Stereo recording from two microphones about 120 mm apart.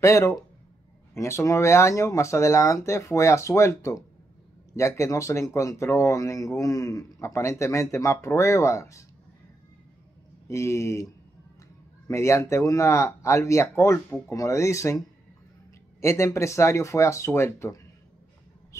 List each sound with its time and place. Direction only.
0.0 s speech: 25° left (ahead or behind)
10.5 s speech: 25° left (ahead or behind)
12.1 s speech: 25° left (ahead or behind)
16.0 s speech: 25° left (ahead or behind)